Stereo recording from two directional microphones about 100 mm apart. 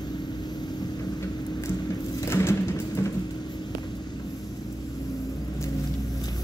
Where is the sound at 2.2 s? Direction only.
25° left (ahead or behind).